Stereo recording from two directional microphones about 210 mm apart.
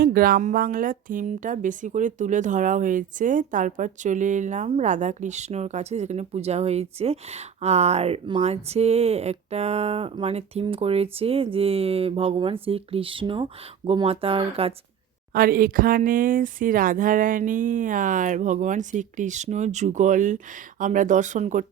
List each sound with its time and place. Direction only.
0.0 s speech: 45° right (ahead or behind); by 14.7 s 25° right (ahead or behind)
15.3 s speech: 45° right (ahead or behind)